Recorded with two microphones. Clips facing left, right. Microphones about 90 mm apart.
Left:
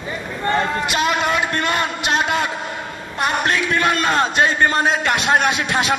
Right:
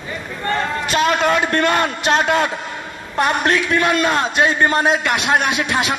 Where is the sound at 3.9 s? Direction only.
30° left (ahead or behind).